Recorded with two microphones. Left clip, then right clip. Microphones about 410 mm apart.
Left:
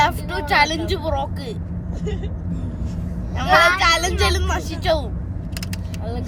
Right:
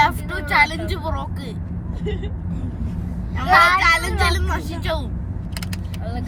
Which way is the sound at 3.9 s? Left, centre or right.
Centre.